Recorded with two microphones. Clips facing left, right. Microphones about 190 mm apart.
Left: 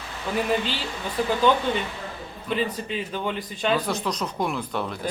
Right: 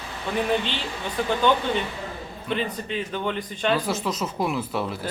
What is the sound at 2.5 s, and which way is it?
Speech, 5° left (ahead or behind).